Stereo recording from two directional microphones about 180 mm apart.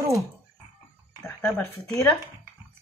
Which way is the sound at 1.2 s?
5° left (ahead or behind).